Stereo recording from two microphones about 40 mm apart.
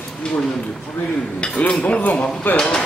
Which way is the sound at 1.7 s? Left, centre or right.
Left.